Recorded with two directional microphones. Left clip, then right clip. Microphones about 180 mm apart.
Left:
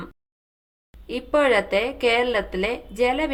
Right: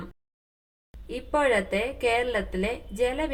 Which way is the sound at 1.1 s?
15° left (ahead or behind).